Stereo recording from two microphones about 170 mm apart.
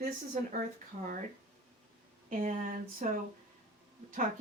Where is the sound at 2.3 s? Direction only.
50° right (ahead or behind).